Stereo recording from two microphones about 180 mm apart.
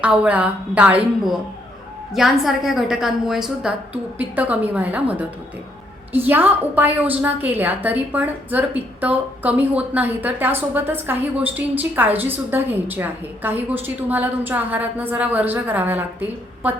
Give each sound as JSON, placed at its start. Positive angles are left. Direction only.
{"t": 0.0, "sound": "a woman's voice", "side_deg": -5}